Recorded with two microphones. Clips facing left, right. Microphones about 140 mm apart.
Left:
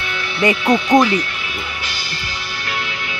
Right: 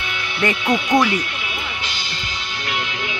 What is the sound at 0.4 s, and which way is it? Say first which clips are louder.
Speech: left 4 dB; 15° left (ahead or behind).